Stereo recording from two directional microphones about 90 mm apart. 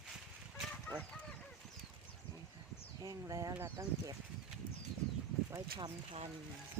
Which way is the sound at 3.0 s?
40° right (ahead or behind).